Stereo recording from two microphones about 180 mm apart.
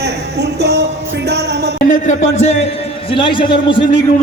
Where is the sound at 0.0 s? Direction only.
70° right (ahead or behind).